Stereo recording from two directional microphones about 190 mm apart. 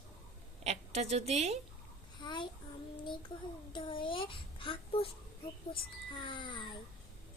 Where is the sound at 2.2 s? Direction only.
25° left (ahead or behind).